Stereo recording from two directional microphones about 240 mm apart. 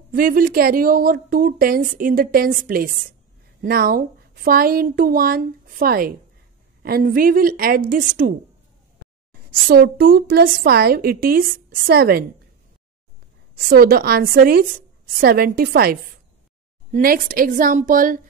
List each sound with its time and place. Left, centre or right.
0.1 s a woman's voice: right
13.7 s a woman's voice: right